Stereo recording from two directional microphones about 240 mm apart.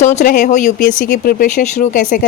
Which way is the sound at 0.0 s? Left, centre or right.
Left.